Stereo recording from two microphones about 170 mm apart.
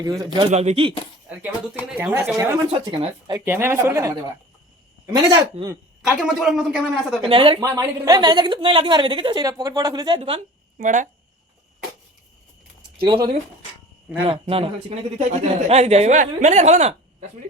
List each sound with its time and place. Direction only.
0.0 s a woman's voice: 20° right (ahead or behind)
0.5 s speech: 40° right (ahead or behind)
2.0 s speech: 10° right (ahead or behind)
2.7 s speech: 35° right (ahead or behind)
3.3 s speech: 15° right (ahead or behind)
5.1 s a woman's voice: 25° right (ahead or behind)
6.1 s speech: 5° right (ahead or behind)
7.2 s speech: 30° right (ahead or behind)
7.6 s a woman's voice: 20° right (ahead or behind); by 10.8 s 35° right (ahead or behind)
10.8 s speech: 50° right (ahead or behind)
13.1 s a woman's voice: 25° right (ahead or behind); by 17.2 s 40° right (ahead or behind)